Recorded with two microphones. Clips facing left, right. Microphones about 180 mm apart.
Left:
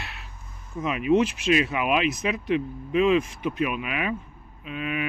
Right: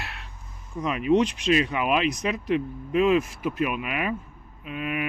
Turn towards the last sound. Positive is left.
turn(degrees=-5)  # may be behind; listen again after turning